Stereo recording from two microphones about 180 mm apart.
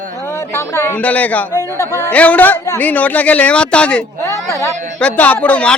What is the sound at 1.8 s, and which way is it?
Speech, 15° right (ahead or behind).